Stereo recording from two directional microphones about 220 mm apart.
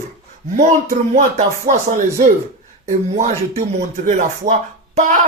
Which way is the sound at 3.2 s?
30° right (ahead or behind).